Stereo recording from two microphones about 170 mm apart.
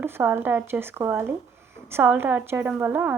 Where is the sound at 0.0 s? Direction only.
15° right (ahead or behind).